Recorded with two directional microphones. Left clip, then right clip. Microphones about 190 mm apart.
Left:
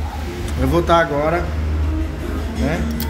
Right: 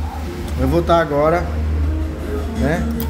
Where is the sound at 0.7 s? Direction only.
10° right (ahead or behind).